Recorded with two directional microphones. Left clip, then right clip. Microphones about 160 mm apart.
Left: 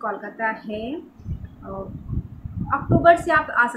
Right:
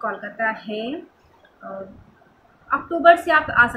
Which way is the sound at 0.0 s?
5° left (ahead or behind).